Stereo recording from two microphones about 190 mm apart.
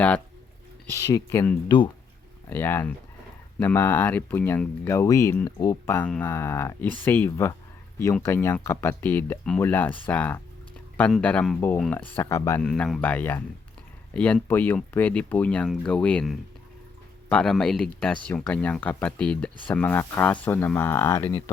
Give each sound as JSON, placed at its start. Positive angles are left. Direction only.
{"t": 0.9, "sound": "speech", "side_deg": 15}
{"t": 2.5, "sound": "speech", "side_deg": 10}